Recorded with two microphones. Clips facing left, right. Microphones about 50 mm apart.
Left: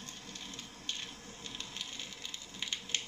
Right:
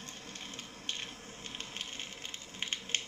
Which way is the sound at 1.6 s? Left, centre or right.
Right.